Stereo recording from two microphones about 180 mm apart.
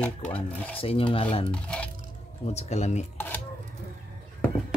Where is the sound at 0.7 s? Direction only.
30° left (ahead or behind).